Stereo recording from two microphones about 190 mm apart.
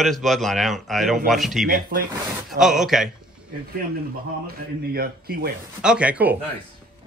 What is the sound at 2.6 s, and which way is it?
Speech, centre (ahead or behind).